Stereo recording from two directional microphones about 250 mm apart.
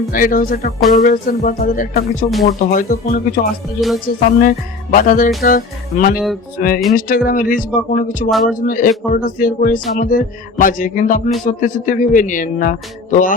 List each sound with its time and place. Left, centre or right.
0.1 s speech: left
3.8 s speech: centre
4.4 s speech: left